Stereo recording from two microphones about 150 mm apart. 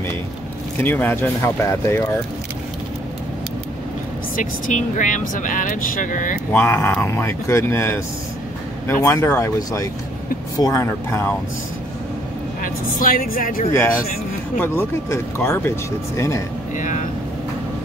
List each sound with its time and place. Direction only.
0.8 s speech: 15° left (ahead or behind)
4.4 s speech: 60° left (ahead or behind)
6.5 s speech: 10° left (ahead or behind)
9.0 s speech: 15° left (ahead or behind)
12.6 s a woman's voice: 70° left (ahead or behind)
14.6 s speech: 15° left (ahead or behind)
16.7 s speech: 60° left (ahead or behind)